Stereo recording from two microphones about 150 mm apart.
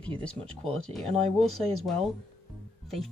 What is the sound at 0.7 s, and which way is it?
Speech, 5° left (ahead or behind).